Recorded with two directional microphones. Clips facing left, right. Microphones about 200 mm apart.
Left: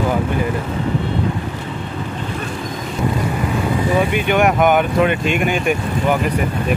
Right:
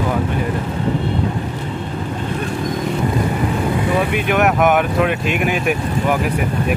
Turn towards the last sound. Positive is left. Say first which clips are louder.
# left 1 dB
turn(degrees=0)  # may be behind; listen again after turning